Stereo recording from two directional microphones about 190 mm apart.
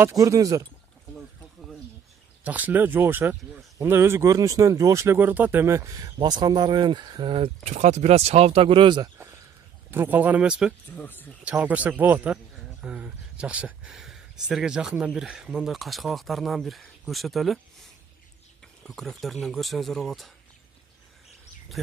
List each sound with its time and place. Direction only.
0.0 s speech: 15° right (ahead or behind)
2.4 s speech: 10° right (ahead or behind)
11.0 s speech: 10° left (ahead or behind)
11.4 s speech: 10° right (ahead or behind)
18.8 s speech: centre (ahead or behind)
21.8 s speech: centre (ahead or behind)